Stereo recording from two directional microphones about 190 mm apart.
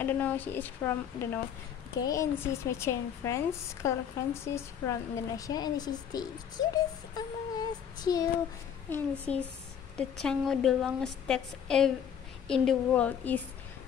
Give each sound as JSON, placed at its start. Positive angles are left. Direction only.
{"t": 0.0, "sound": "a woman's voice", "side_deg": 10}
{"t": 8.9, "sound": "a woman's voice", "side_deg": 5}